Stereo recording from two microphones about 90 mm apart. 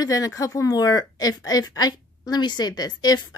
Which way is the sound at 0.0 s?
40° left (ahead or behind).